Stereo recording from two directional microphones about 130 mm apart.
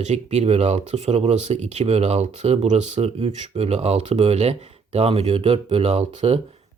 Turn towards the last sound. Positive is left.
turn(degrees=-55)  # may be behind; listen again after turning